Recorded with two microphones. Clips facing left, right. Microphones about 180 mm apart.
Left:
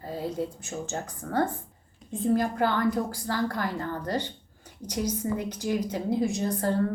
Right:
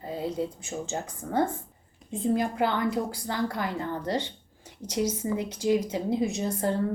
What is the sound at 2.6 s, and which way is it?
A woman's voice, 20° right (ahead or behind).